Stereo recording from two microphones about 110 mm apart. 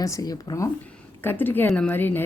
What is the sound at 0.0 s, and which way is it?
Speech, 35° left (ahead or behind).